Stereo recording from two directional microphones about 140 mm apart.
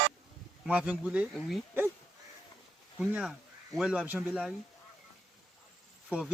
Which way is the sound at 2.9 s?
5° right (ahead or behind).